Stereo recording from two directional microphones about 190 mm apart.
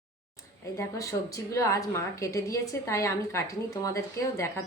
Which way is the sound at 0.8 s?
15° left (ahead or behind).